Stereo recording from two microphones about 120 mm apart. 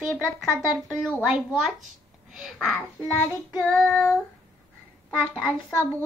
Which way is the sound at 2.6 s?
15° left (ahead or behind).